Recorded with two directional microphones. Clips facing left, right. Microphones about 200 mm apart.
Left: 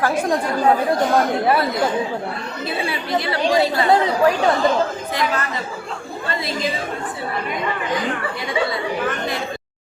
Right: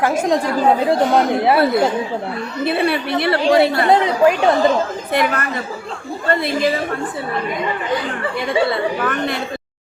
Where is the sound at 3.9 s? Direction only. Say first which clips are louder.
Right 1 dB; 20° right (ahead or behind).